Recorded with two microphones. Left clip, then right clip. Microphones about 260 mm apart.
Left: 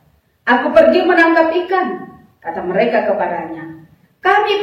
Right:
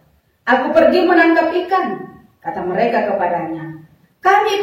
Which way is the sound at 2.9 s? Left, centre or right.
Centre.